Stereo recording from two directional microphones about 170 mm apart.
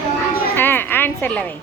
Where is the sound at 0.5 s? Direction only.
10° left (ahead or behind).